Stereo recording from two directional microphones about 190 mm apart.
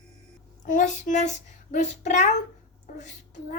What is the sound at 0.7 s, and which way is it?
A woman's voice, 40° left (ahead or behind).